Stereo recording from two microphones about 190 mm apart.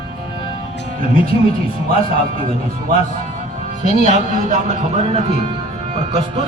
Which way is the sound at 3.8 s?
40° right (ahead or behind).